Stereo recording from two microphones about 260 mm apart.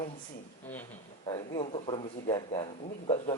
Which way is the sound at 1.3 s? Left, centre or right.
Centre.